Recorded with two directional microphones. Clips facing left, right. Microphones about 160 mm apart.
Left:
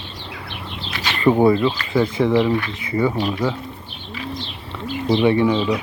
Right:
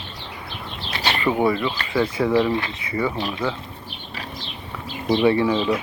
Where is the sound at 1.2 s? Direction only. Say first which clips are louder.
Left 7 dB; 35° left (ahead or behind).